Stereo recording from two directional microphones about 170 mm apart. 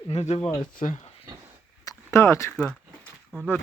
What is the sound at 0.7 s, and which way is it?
Speech, 55° left (ahead or behind).